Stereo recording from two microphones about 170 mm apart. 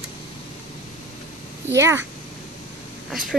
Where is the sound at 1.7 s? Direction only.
15° right (ahead or behind).